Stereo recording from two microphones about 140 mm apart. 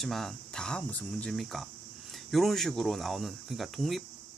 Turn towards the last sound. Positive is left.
turn(degrees=0)  # may be behind; listen again after turning